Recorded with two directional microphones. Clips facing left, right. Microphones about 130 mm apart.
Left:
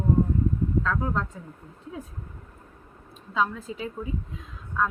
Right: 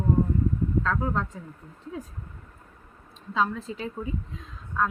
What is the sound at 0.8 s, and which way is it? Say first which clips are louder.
Speech: right 1 dB; centre (ahead or behind).